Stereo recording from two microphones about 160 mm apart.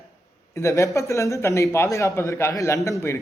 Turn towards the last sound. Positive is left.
turn(degrees=20)  # may be behind; listen again after turning